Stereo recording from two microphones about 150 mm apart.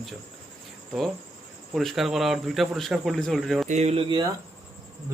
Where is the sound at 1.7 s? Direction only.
Centre (ahead or behind).